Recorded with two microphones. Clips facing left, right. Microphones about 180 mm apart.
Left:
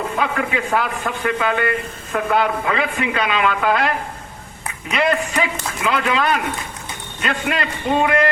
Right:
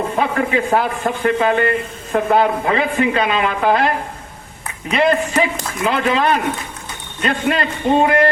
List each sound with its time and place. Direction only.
0.2 s a man's voice: 35° right (ahead or behind)